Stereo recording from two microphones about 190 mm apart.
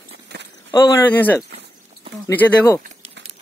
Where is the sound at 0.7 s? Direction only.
20° left (ahead or behind).